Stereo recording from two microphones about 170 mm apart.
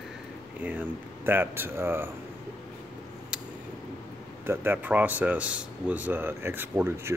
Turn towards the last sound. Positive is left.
turn(degrees=-15)  # may be behind; listen again after turning